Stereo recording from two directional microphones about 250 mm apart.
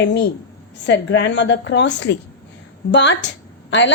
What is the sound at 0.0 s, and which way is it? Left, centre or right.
A woman's voice, left.